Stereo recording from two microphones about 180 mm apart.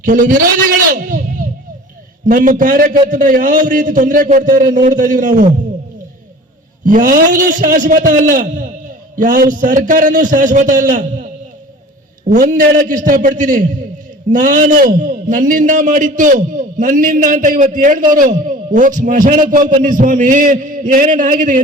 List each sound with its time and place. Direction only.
0.0 s a man's voice: 45° right (ahead or behind)
6.8 s a man's voice: 50° right (ahead or behind)
12.3 s a man's voice: 45° right (ahead or behind)